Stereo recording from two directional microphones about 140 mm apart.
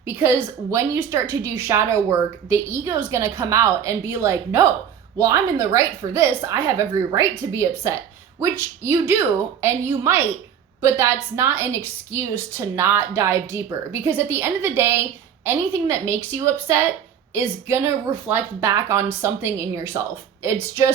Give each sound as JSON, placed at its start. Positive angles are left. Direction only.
{"t": 0.0, "sound": "a woman's voice", "side_deg": -15}